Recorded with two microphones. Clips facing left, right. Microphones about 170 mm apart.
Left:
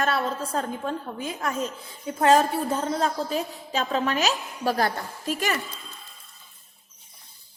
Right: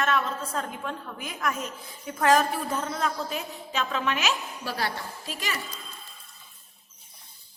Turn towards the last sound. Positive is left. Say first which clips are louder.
# left 7 dB
turn(degrees=50)  # may be behind; listen again after turning